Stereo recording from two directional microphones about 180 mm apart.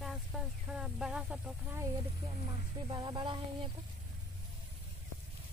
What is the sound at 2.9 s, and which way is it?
Speech, 25° right (ahead or behind).